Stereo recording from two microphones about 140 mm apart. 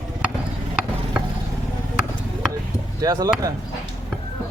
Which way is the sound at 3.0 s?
25° right (ahead or behind).